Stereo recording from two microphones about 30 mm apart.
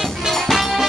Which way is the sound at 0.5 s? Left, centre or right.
Centre.